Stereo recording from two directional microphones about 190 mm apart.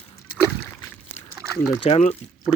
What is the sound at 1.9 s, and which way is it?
Speech, 35° left (ahead or behind).